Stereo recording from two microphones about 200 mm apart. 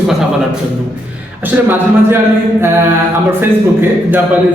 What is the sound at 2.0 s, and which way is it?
Speech, 10° right (ahead or behind).